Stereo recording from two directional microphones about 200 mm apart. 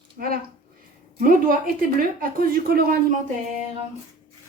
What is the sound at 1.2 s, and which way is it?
A woman's voice, 45° right (ahead or behind).